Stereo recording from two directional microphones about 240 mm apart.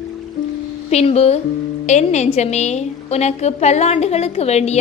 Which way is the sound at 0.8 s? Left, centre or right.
Left.